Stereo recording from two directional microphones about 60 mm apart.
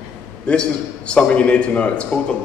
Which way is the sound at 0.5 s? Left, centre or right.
Centre.